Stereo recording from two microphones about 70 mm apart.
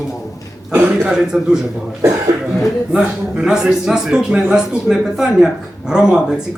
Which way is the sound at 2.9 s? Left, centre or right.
Centre.